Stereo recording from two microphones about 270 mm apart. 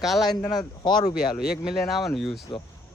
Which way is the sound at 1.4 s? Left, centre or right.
Centre.